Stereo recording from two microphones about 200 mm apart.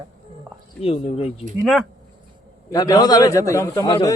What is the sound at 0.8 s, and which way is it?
Speech, 30° left (ahead or behind).